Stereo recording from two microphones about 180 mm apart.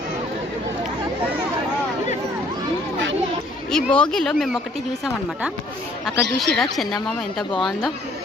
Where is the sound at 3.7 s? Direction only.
5° left (ahead or behind).